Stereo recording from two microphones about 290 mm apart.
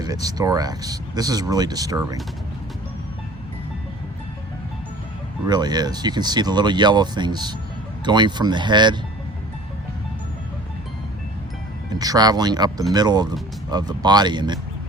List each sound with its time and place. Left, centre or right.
0.0 s speech: centre
5.5 s speech: centre
11.9 s speech: centre